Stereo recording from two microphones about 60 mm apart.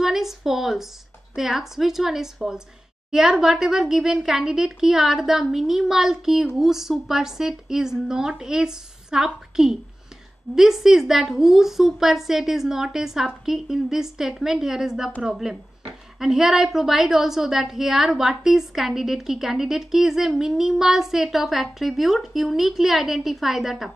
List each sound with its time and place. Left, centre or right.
0.0 s a woman's voice: centre